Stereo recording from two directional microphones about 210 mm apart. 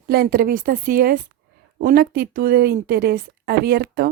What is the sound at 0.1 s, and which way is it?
A woman's voice, 45° right (ahead or behind).